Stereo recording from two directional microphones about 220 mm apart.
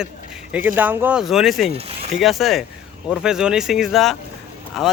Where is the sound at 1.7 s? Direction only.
25° right (ahead or behind).